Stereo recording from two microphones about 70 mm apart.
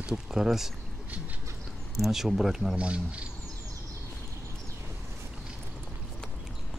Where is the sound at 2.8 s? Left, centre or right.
Centre.